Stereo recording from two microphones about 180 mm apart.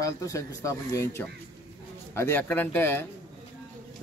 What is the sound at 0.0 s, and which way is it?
A man's voice, 20° left (ahead or behind).